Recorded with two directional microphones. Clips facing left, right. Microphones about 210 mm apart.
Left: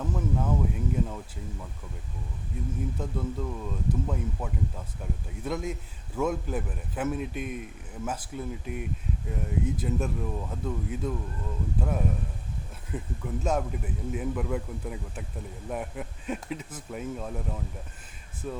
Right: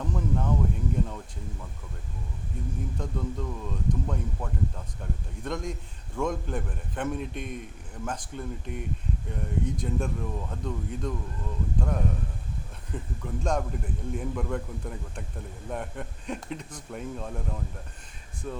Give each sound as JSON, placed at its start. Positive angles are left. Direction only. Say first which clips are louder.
{"t": 0.0, "sound": "speech", "louder": "even", "side_deg": 5}
{"t": 0.9, "sound": "a sound", "louder": "left 1 dB", "side_deg": 5}
{"t": 2.5, "sound": "speech", "louder": "left 2 dB", "side_deg": 5}